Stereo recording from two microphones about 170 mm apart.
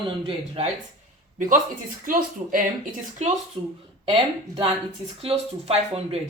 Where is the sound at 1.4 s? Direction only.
50° right (ahead or behind).